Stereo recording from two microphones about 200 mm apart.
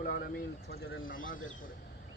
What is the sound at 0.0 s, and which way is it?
Speech, 45° left (ahead or behind).